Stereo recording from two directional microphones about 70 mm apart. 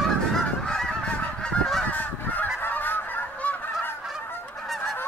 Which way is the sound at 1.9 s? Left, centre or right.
Left.